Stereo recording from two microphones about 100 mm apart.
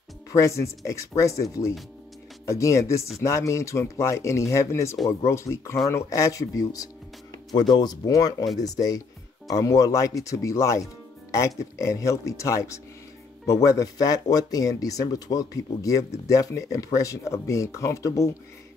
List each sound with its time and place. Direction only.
0.3 s speech: 30° left (ahead or behind)
7.5 s speech: 45° left (ahead or behind); by 18.3 s 30° left (ahead or behind)